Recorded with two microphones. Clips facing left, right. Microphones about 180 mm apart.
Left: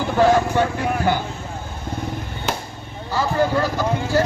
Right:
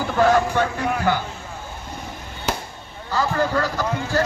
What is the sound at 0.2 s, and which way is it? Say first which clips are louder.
Speech: left 1 dB; 15° left (ahead or behind).